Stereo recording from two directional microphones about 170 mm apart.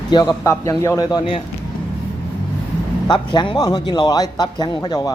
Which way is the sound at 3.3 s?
25° left (ahead or behind).